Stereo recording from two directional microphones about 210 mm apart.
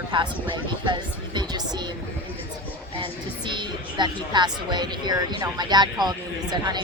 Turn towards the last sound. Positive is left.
turn(degrees=-20)  # may be behind; listen again after turning